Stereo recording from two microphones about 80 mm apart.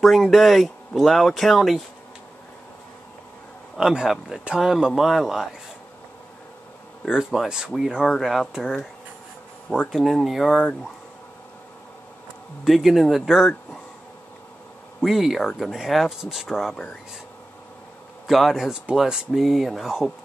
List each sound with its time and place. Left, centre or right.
0.0 s speech: centre
3.7 s speech: centre
7.1 s speech: centre
9.9 s speech: centre
12.6 s speech: centre
15.0 s speech: centre
16.7 s speech: centre
18.2 s speech: centre